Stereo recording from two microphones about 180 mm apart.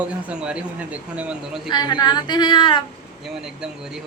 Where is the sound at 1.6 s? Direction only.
25° left (ahead or behind).